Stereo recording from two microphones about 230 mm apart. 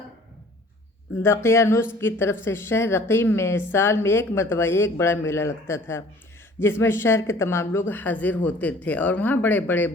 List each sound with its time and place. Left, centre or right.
1.2 s speech: centre